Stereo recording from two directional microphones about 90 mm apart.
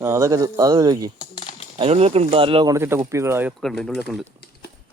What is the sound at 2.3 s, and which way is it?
Speech, 85° right.